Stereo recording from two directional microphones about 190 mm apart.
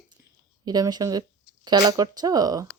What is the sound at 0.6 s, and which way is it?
Speech, 20° right (ahead or behind).